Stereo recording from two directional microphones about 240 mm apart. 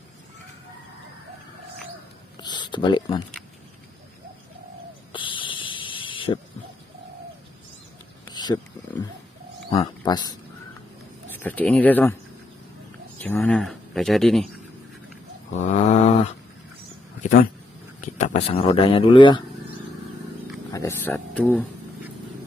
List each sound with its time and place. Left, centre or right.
2.4 s speech: centre
5.1 s a sound: left
8.3 s speech: centre
11.3 s speech: centre
13.2 s speech: centre
15.6 s a sound: left
18.1 s speech: left
20.7 s speech: centre